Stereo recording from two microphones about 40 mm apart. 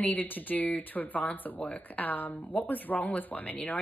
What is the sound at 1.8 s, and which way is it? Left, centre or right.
Speech, left.